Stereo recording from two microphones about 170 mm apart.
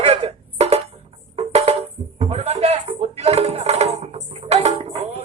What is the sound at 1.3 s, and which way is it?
Music, 40° right (ahead or behind).